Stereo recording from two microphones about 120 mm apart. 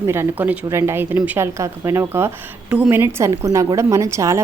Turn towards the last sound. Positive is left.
turn(degrees=-25)  # may be behind; listen again after turning